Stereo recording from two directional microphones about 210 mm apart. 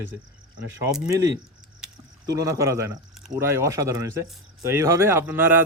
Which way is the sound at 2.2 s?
15° right (ahead or behind).